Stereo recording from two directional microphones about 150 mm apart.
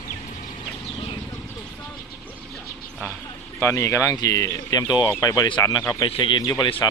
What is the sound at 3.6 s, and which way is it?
Speech, 20° left (ahead or behind).